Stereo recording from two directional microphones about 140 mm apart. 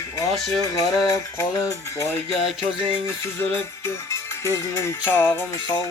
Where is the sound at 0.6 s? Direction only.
25° left (ahead or behind).